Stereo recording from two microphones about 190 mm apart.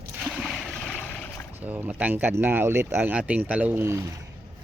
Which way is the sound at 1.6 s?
10° right (ahead or behind).